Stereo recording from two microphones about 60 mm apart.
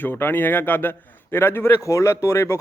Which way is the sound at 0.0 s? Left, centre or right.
Left.